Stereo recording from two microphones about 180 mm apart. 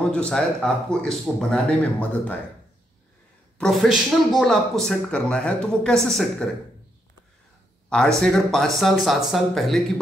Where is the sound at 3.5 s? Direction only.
Centre (ahead or behind).